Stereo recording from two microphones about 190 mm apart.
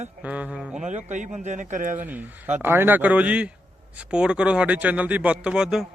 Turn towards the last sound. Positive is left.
turn(degrees=-5)  # may be behind; listen again after turning